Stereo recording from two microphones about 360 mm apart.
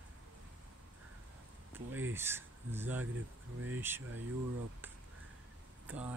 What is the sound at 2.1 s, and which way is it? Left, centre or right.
Speech, centre.